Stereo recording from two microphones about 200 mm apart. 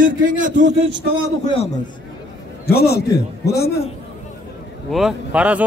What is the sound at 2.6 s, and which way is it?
Speech, 50° left (ahead or behind).